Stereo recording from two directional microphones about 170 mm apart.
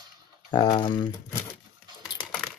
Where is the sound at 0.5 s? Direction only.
25° left (ahead or behind).